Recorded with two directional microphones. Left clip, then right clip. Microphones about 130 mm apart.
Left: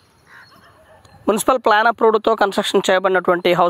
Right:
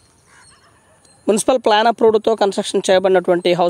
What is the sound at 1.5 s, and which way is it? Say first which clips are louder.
Speech: even; 15° right (ahead or behind).